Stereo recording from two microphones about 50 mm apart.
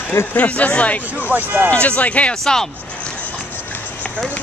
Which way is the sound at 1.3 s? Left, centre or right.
Right.